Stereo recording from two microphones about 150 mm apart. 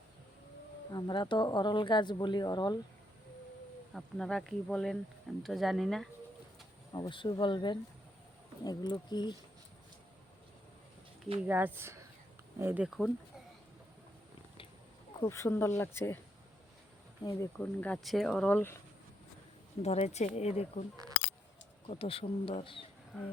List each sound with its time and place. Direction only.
0.9 s speech: 25° left (ahead or behind)
3.9 s speech: 5° left (ahead or behind)
6.9 s speech: 30° left (ahead or behind)
11.4 s speech: 15° right (ahead or behind)
15.2 s speech: 20° left (ahead or behind)
17.2 s speech: 15° left (ahead or behind)
19.8 s speech: 45° left (ahead or behind)
21.8 s speech: 40° left (ahead or behind)